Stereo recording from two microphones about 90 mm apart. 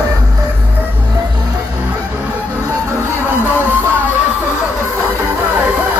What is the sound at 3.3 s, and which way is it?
Music, 25° left (ahead or behind).